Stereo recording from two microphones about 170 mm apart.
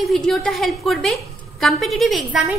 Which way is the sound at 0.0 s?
Centre (ahead or behind).